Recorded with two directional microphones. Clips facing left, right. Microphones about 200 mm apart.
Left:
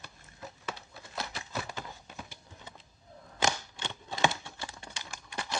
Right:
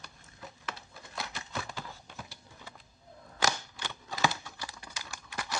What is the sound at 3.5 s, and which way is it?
Typing, 25° left (ahead or behind).